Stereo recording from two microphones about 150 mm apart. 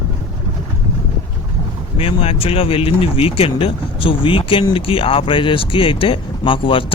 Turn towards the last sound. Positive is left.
turn(degrees=35)  # may be behind; listen again after turning